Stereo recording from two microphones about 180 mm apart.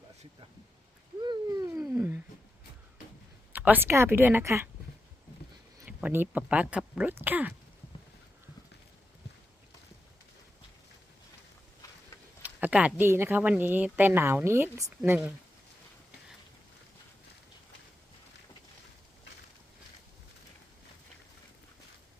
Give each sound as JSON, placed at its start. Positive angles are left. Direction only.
{"t": 1.2, "sound": "a sound", "side_deg": -25}
{"t": 1.7, "sound": "cat", "side_deg": -15}
{"t": 3.5, "sound": "speech", "side_deg": -10}
{"t": 5.8, "sound": "speech", "side_deg": -10}
{"t": 12.4, "sound": "speech", "side_deg": -10}